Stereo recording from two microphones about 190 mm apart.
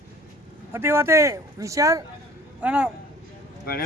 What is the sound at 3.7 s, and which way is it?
Speech, 50° left (ahead or behind).